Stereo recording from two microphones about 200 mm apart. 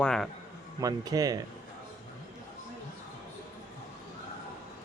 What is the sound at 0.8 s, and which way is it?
Speech, 20° right (ahead or behind).